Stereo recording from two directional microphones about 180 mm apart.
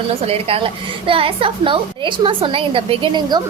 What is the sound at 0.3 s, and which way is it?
A woman's voice, 30° right (ahead or behind).